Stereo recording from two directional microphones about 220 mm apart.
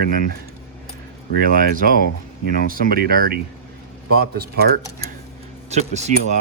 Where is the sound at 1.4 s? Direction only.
40° right (ahead or behind).